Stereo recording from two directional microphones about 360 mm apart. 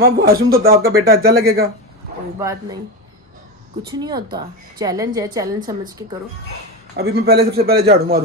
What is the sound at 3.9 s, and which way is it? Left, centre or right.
A woman's voice, centre.